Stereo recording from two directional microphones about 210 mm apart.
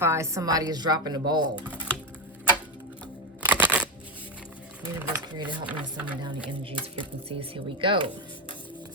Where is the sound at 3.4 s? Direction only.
5° right (ahead or behind).